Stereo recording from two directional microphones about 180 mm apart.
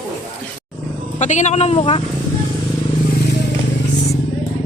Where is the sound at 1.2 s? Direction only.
40° left (ahead or behind).